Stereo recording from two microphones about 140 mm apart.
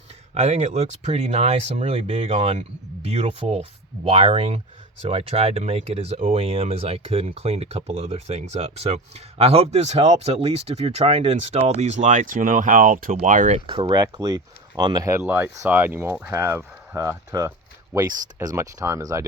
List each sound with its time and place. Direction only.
0.3 s speech: 55° right (ahead or behind)
13.7 s speech: 35° right (ahead or behind)